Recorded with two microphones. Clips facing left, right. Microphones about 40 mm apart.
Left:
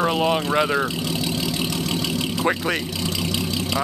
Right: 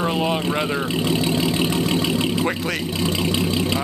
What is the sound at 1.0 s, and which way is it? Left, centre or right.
Vehicle, right.